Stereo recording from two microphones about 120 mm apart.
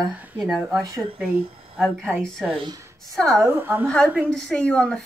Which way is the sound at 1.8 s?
5° left (ahead or behind).